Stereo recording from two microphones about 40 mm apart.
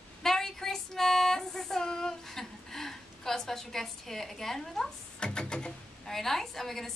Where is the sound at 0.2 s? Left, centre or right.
Centre.